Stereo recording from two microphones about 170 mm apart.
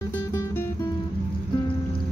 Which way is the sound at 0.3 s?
15° left (ahead or behind).